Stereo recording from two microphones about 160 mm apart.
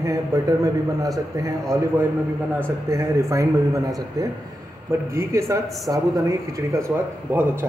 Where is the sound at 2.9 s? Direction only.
20° right (ahead or behind).